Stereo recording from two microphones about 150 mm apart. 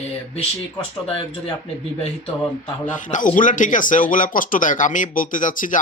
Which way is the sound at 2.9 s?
60° left (ahead or behind).